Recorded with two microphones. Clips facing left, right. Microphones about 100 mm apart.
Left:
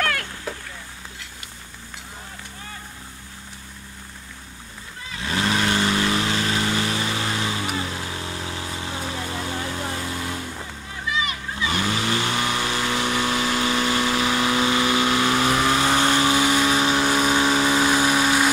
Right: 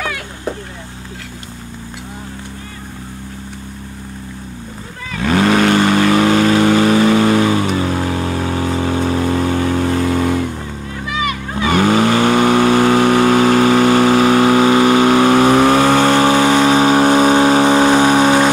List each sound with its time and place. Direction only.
5.1 s vehicle: 60° right (ahead or behind)
11.1 s vehicle: 60° right (ahead or behind)